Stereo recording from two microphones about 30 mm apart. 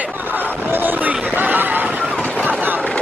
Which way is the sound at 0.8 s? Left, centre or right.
Right.